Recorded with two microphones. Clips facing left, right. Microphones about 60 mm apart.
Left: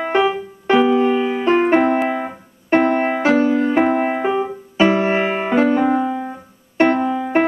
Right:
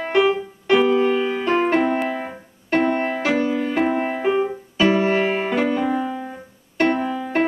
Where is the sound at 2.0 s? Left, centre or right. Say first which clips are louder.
Left 4 dB; left.